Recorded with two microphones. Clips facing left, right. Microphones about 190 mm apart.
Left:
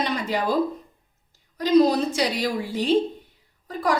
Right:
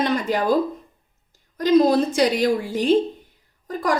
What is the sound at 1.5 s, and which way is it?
A woman's voice, 50° right (ahead or behind).